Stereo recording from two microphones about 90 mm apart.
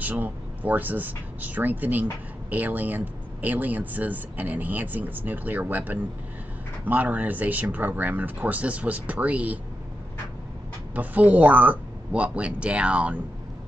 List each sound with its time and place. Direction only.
0.0 s speech: 20° right (ahead or behind)
11.0 s speech: 15° right (ahead or behind)